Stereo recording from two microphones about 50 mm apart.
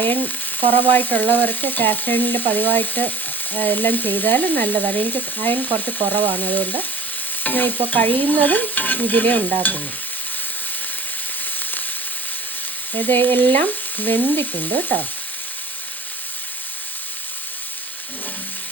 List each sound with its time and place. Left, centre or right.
0.0 s frying: left
13.0 s frying: left